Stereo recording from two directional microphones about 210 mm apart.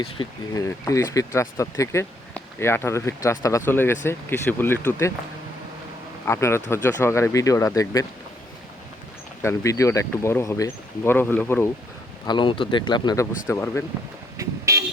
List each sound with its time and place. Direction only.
0.0 s speech: 20° left (ahead or behind)
6.2 s speech: 10° left (ahead or behind)
9.4 s speech: 15° left (ahead or behind)
12.2 s speech: 20° left (ahead or behind)
14.3 s vehicle: 15° right (ahead or behind)